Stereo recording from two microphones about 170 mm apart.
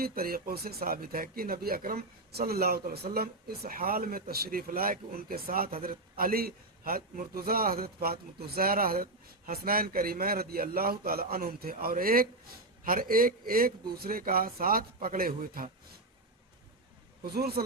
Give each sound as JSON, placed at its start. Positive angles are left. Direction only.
{"t": 0.0, "sound": "speech", "side_deg": -60}
{"t": 17.2, "sound": "speech", "side_deg": -65}